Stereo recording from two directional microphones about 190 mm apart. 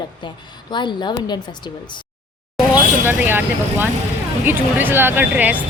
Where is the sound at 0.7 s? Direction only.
25° left (ahead or behind).